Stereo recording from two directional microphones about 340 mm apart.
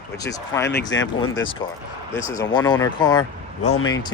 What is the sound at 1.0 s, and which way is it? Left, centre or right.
Speech, left.